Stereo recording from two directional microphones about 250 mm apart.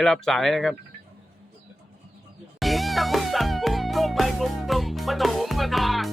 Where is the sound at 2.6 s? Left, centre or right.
Centre.